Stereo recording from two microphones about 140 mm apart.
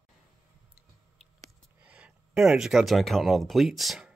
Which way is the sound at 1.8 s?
10° right (ahead or behind).